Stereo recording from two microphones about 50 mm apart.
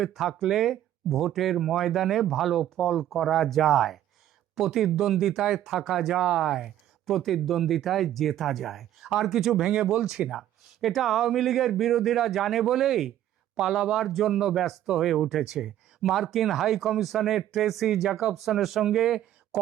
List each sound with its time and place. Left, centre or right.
0.0 s speech: centre
6.5 s speech: centre
9.6 s speech: centre
16.1 s speech: centre